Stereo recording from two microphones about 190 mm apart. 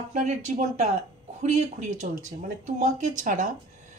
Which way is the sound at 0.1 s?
40° right (ahead or behind).